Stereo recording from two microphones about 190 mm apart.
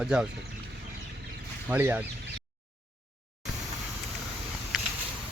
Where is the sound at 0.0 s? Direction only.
5° right (ahead or behind).